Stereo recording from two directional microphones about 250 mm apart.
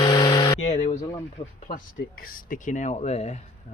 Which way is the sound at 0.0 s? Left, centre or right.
Centre.